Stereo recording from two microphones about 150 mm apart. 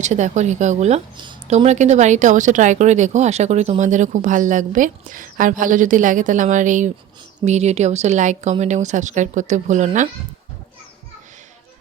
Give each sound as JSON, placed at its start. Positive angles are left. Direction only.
{"t": 0.0, "sound": "speech", "side_deg": -50}
{"t": 1.1, "sound": "speech", "side_deg": -30}
{"t": 1.5, "sound": "speech", "side_deg": -50}